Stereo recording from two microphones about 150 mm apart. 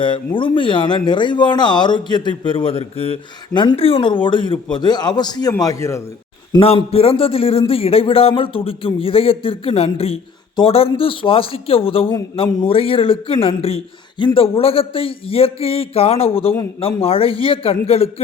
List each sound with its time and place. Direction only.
0.0 s speech: 35° left (ahead or behind)
6.6 s speech: 40° left (ahead or behind)